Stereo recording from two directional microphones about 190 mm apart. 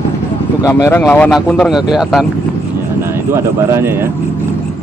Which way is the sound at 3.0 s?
15° right (ahead or behind).